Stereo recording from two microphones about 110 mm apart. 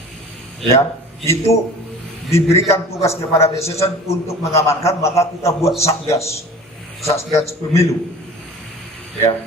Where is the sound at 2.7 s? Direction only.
25° left (ahead or behind).